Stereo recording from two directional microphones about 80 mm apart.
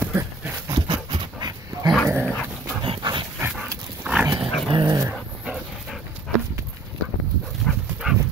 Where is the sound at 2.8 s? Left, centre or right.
Right.